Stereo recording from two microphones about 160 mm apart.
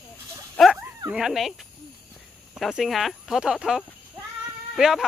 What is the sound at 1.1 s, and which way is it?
Speech, 5° right (ahead or behind).